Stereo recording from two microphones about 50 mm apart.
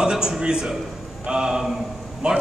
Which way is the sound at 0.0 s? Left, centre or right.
Centre.